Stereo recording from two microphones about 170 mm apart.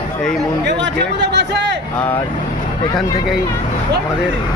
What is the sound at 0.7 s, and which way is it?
Speech, 90° right.